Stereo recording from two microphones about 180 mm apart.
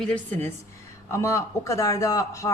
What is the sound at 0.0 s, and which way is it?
Speech, 10° left (ahead or behind).